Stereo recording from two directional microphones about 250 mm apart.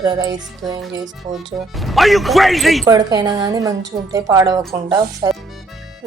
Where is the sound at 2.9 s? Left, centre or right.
Centre.